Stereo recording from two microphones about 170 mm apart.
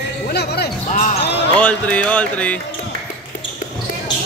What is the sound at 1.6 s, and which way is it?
Music, 10° left (ahead or behind).